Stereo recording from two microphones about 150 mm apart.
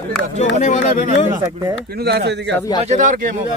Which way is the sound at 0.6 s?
55° left (ahead or behind).